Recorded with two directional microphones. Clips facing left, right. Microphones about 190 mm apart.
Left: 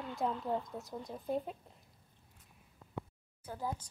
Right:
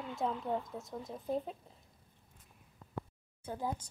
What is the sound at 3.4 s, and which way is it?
Speech, 15° right (ahead or behind).